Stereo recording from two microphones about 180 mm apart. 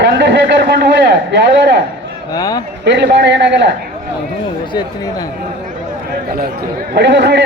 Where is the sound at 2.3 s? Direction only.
20° left (ahead or behind).